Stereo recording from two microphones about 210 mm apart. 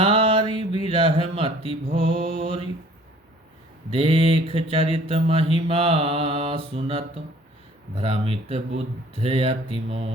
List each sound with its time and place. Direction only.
0.0 s mantra: 25° right (ahead or behind)
3.9 s mantra: 25° right (ahead or behind)